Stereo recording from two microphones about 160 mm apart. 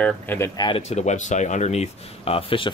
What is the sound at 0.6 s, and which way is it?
Speech, 40° left (ahead or behind).